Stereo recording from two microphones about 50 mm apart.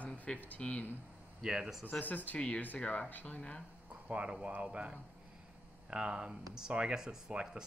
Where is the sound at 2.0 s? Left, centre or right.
Left.